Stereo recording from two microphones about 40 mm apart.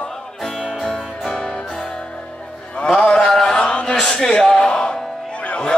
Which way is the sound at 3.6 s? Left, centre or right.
Left.